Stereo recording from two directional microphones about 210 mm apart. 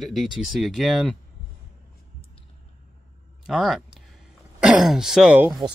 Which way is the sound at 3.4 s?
Centre (ahead or behind).